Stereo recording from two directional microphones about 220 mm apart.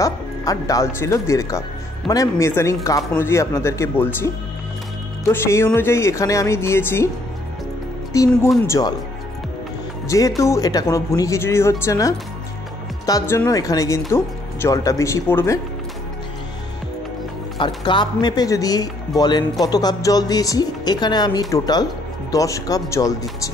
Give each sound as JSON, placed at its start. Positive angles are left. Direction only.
{"t": 0.0, "sound": "speech", "side_deg": 15}
{"t": 8.1, "sound": "speech", "side_deg": 15}
{"t": 10.0, "sound": "speech", "side_deg": 15}
{"t": 17.6, "sound": "speech", "side_deg": 20}